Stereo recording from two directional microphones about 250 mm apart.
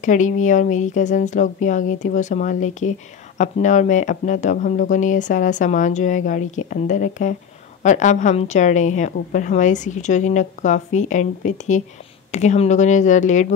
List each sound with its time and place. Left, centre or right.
0.0 s speech: left